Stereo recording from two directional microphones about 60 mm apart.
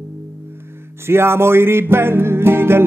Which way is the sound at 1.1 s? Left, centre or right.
Right.